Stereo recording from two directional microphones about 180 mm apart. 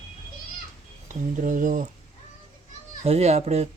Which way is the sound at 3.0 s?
35° right (ahead or behind).